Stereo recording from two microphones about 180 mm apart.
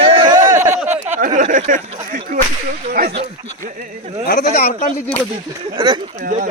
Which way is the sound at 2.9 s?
60° right (ahead or behind).